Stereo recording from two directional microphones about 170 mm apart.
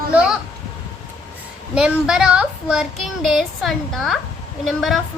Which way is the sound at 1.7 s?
5° right (ahead or behind).